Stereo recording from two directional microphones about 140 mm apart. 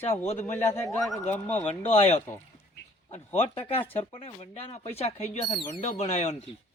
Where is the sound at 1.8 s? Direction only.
45° left (ahead or behind).